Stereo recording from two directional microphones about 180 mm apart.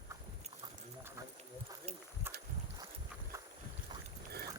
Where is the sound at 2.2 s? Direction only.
10° right (ahead or behind).